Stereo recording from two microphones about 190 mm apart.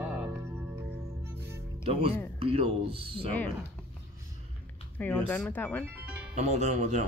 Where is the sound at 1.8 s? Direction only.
30° right (ahead or behind).